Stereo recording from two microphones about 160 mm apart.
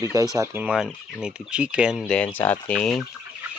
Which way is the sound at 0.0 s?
20° right (ahead or behind).